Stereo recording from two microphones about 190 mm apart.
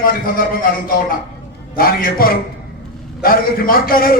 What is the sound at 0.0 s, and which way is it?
A man's voice, 50° left (ahead or behind).